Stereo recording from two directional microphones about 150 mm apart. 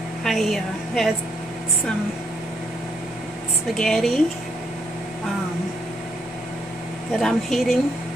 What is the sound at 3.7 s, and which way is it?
Speech, centre (ahead or behind).